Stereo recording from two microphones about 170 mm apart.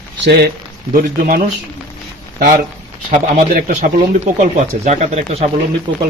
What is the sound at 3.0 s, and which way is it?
Speech, 55° right (ahead or behind).